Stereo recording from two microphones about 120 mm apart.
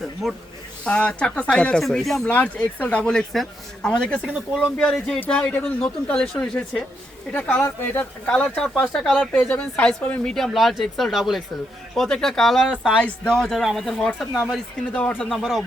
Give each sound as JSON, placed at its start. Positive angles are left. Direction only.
{"t": 0.2, "sound": "speech", "side_deg": 0}
{"t": 7.6, "sound": "speech", "side_deg": 20}
{"t": 8.3, "sound": "speech", "side_deg": 10}
{"t": 13.0, "sound": "speech", "side_deg": 10}